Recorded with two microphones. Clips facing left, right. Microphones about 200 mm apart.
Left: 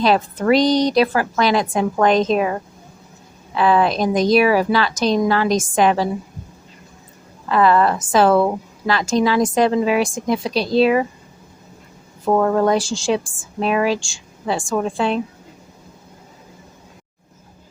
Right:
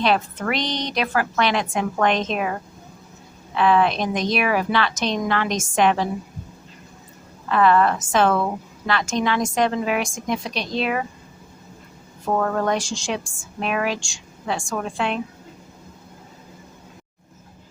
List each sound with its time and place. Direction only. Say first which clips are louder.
0.0 s a woman's voice: left 4 dB; 35° left (ahead or behind)
3.5 s a woman's voice: left 2 dB; 35° left (ahead or behind)
7.4 s a woman's voice: left 2 dB; 35° left (ahead or behind)
12.6 s a woman's voice: left 6 dB; 30° left (ahead or behind)